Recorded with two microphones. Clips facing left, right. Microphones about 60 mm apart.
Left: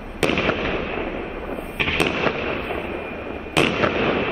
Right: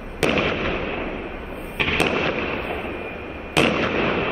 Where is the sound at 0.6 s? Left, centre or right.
Right.